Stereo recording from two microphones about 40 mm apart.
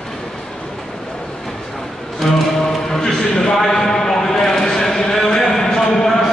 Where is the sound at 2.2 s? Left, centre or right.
Centre.